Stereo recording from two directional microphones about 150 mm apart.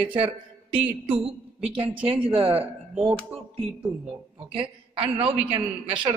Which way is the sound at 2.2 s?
35° right (ahead or behind).